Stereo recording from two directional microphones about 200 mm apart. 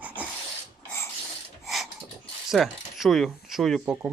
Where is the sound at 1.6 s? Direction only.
Centre (ahead or behind).